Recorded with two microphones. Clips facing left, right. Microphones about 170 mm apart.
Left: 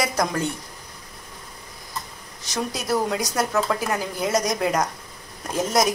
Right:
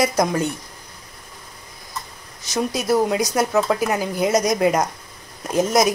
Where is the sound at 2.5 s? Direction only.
15° right (ahead or behind).